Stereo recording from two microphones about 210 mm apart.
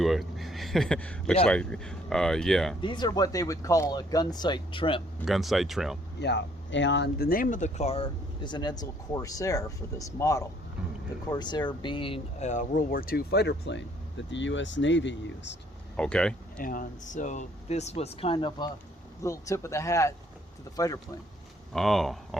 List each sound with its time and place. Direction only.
0.0 s speech: centre (ahead or behind)
2.8 s speech: 20° left (ahead or behind)
5.2 s speech: centre (ahead or behind)
6.1 s speech: 55° left (ahead or behind)
16.0 s speech: 5° left (ahead or behind)
16.6 s speech: 40° left (ahead or behind); by 21.0 s 15° left (ahead or behind)
21.7 s speech: centre (ahead or behind)